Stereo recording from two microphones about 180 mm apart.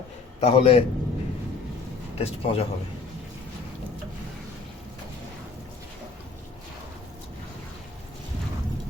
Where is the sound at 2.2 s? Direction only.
35° left (ahead or behind).